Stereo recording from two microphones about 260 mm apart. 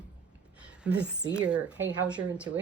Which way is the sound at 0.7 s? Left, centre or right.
Centre.